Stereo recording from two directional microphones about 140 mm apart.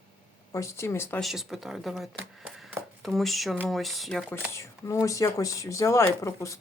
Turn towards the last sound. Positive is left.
turn(degrees=20)  # may be behind; listen again after turning